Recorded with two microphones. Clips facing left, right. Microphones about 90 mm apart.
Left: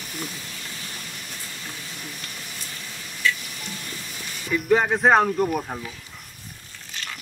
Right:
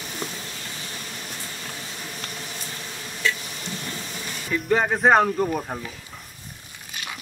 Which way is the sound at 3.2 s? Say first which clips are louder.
Left 1 dB; 30° right (ahead or behind).